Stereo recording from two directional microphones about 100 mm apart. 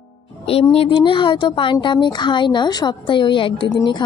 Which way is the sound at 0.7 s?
70° left (ahead or behind).